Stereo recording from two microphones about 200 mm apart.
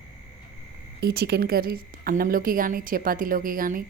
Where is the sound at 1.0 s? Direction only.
50° right (ahead or behind).